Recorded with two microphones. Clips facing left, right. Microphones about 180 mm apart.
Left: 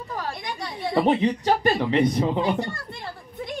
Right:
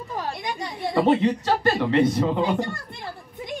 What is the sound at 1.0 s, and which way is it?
Speech, 15° left (ahead or behind).